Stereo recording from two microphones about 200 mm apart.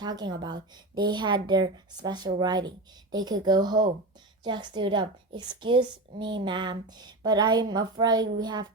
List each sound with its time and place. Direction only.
0.0 s a woman's voice: 20° right (ahead or behind)